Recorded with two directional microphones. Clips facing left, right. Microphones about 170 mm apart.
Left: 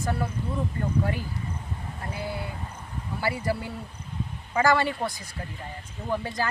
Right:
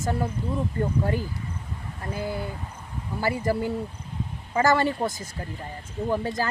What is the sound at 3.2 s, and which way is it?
Speech, 45° right (ahead or behind).